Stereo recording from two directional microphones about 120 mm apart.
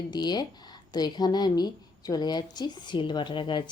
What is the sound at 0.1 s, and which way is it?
Speech, 35° left (ahead or behind).